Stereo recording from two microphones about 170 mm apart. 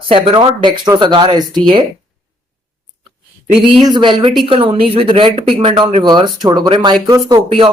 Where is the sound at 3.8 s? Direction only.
25° right (ahead or behind).